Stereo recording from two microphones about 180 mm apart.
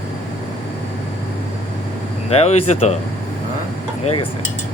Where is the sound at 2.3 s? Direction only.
35° left (ahead or behind).